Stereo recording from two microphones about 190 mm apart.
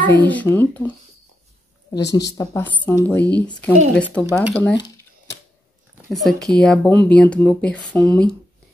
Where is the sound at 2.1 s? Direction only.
20° left (ahead or behind).